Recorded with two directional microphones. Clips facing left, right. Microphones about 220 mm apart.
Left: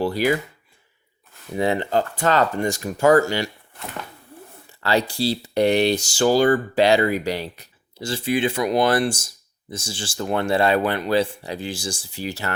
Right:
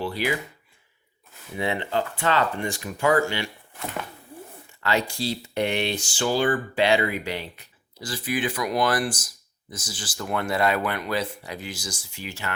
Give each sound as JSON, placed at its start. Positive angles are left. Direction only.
{"t": 0.0, "sound": "speech", "side_deg": 40}
{"t": 1.5, "sound": "speech", "side_deg": 40}
{"t": 4.8, "sound": "speech", "side_deg": 35}
{"t": 7.9, "sound": "speech", "side_deg": 25}